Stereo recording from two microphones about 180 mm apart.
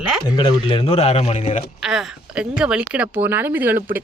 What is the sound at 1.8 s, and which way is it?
Speech, 5° right (ahead or behind).